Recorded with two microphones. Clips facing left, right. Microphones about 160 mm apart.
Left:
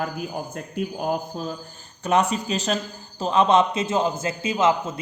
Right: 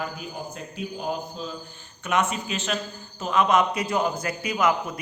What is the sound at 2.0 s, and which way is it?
A man's voice, 35° left (ahead or behind).